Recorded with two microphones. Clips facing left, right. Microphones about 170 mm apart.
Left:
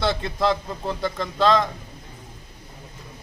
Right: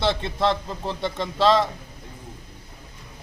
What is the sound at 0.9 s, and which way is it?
Speech, 25° right (ahead or behind).